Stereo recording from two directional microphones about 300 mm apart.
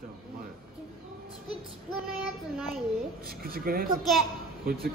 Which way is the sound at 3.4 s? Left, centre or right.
Right.